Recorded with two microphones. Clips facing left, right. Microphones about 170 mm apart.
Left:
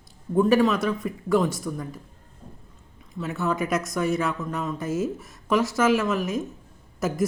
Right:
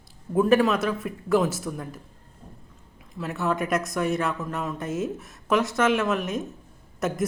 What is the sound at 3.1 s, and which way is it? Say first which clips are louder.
A woman's voice: even; centre (ahead or behind).